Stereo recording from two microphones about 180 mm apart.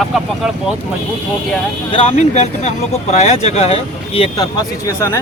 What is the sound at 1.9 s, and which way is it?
Speech, 35° left (ahead or behind).